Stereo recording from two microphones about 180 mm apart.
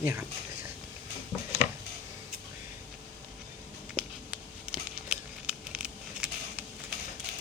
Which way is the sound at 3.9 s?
5° right (ahead or behind).